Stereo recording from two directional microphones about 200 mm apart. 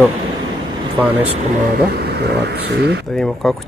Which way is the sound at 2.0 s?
55° right (ahead or behind).